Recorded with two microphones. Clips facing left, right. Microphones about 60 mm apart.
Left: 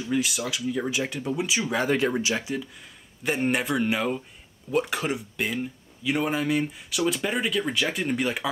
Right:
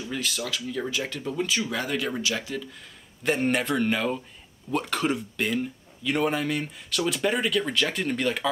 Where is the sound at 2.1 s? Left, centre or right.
Left.